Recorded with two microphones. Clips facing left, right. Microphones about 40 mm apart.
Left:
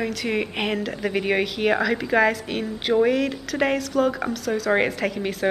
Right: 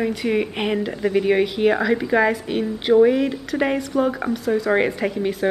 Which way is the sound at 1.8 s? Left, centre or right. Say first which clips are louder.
Right 2 dB; centre.